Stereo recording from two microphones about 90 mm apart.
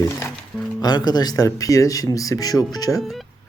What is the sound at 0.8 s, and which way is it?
Speech, 50° left (ahead or behind).